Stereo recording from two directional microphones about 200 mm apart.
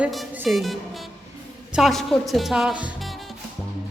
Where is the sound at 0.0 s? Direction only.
5° right (ahead or behind).